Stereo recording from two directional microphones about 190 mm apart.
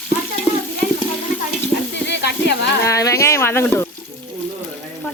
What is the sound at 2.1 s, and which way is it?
Sizzle, 60° left (ahead or behind).